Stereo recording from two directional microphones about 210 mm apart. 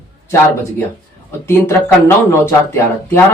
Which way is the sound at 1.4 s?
10° left (ahead or behind).